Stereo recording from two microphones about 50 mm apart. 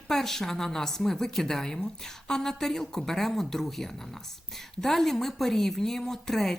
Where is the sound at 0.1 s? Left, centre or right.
Centre.